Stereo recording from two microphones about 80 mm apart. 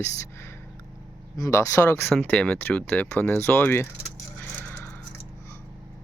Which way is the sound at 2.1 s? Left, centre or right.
Left.